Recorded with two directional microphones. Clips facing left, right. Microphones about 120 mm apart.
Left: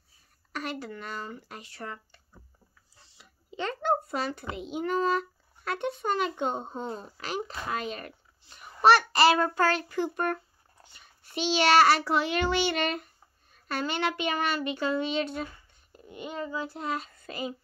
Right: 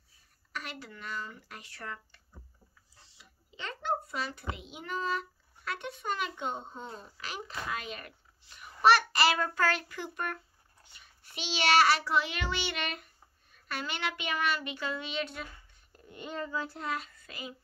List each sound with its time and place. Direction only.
0.5 s speech: 40° left (ahead or behind)
1.6 s speech: 25° left (ahead or behind)
3.2 s a child's voice: 45° left (ahead or behind)
15.9 s a child's voice: 10° left (ahead or behind)
16.8 s speech: 30° left (ahead or behind)